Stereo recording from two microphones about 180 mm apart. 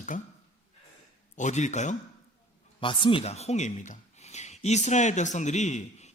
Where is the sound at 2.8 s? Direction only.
30° left (ahead or behind).